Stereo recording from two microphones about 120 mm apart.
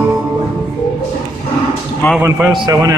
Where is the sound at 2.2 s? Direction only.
20° right (ahead or behind).